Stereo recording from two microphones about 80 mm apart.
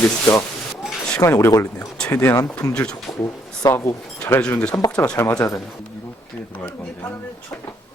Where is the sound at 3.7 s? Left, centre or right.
Left.